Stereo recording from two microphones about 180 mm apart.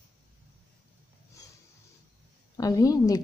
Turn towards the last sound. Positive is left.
turn(degrees=20)  # may be behind; listen again after turning